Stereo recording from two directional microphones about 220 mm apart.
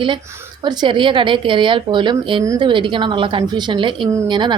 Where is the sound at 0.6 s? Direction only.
20° right (ahead or behind).